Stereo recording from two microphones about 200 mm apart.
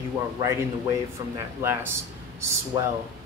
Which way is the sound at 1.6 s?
10° right (ahead or behind).